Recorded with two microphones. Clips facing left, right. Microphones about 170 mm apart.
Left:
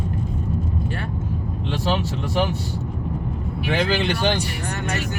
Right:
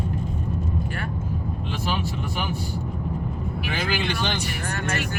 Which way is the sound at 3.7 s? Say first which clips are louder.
Left 6 dB; 70° left (ahead or behind).